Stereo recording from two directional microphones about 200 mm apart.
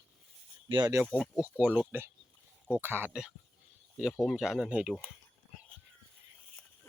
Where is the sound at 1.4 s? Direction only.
5° right (ahead or behind).